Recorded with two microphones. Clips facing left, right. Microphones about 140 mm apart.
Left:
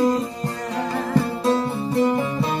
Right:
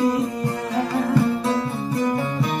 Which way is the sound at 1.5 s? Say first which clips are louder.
Left 2 dB; 25° left (ahead or behind).